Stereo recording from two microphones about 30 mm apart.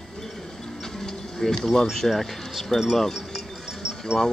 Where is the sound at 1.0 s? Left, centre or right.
Centre.